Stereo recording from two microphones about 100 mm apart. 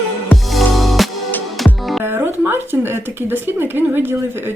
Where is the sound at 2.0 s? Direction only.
20° right (ahead or behind).